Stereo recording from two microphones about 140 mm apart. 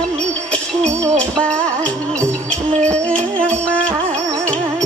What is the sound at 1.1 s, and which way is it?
Music, 10° left (ahead or behind).